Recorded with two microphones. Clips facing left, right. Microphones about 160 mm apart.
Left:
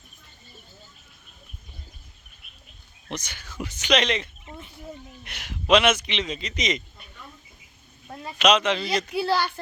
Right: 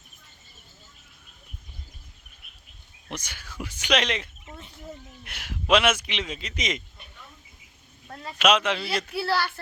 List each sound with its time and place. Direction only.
3.1 s a man's voice: 10° right (ahead or behind)
8.0 s a sound: 15° left (ahead or behind)
8.4 s a man's voice: 5° right (ahead or behind)
9.0 s speech: 15° left (ahead or behind)